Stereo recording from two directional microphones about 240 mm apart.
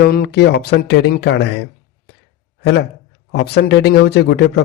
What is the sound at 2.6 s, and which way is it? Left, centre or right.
A man's voice, left.